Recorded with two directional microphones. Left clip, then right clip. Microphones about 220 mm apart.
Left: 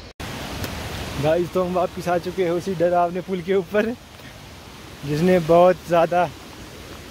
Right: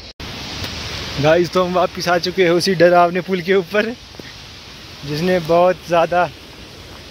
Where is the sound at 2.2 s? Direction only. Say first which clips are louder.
Right 8 dB; 30° right (ahead or behind).